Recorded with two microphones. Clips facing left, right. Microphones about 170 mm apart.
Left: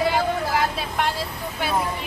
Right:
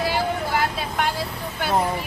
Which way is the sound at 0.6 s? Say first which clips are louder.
Even; centre (ahead or behind).